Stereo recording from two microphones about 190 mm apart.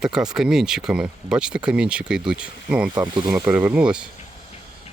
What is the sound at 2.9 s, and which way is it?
Speech, 25° right (ahead or behind).